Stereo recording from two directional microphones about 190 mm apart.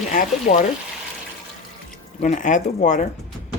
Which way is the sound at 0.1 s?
45° left (ahead or behind).